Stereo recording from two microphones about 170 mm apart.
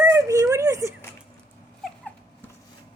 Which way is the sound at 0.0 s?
15° right (ahead or behind).